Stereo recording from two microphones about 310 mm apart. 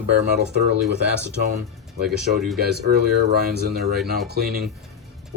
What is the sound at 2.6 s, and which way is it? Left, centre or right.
Speech, right.